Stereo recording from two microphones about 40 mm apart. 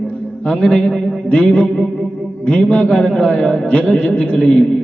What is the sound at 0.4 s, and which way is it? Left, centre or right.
A man's voice, left.